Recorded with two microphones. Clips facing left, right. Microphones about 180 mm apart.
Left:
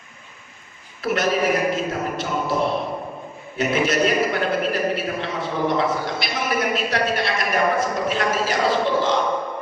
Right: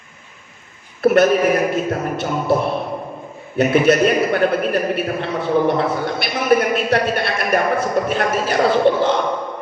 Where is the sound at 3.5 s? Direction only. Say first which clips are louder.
Right 6 dB; 60° right (ahead or behind).